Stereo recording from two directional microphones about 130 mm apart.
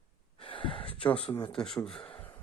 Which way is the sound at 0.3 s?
40° left (ahead or behind).